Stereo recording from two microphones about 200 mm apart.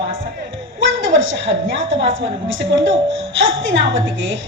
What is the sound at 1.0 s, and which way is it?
Speech, 70° right (ahead or behind).